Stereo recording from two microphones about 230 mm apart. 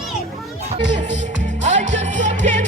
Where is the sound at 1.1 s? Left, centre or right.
Right.